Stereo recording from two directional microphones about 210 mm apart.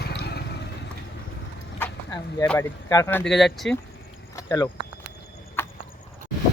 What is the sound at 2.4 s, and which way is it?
Speech, 15° left (ahead or behind).